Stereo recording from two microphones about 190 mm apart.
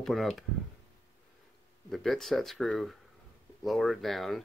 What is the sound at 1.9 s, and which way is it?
Speech, centre (ahead or behind).